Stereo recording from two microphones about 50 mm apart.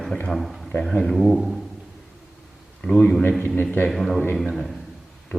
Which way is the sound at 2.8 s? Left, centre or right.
Left.